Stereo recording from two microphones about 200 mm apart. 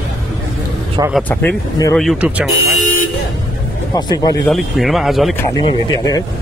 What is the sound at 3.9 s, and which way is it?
Speech, 20° left (ahead or behind).